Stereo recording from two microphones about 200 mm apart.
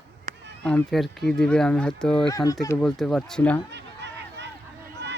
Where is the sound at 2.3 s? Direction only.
15° left (ahead or behind).